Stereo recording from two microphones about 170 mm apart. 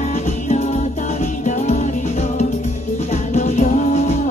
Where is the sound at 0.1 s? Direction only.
45° left (ahead or behind).